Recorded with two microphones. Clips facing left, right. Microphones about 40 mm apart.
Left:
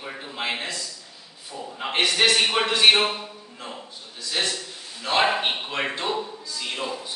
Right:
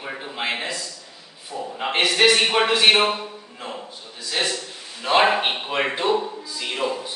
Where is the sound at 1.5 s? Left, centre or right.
Centre.